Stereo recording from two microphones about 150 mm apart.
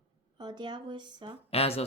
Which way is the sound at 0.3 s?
30° right (ahead or behind).